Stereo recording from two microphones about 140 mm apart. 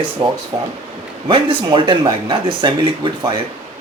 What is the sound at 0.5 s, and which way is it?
Speech, 35° right (ahead or behind).